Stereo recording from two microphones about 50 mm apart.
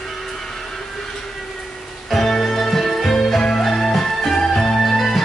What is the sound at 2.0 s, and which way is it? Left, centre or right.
Music, centre.